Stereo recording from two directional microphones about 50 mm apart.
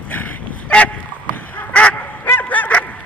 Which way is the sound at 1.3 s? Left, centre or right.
Left.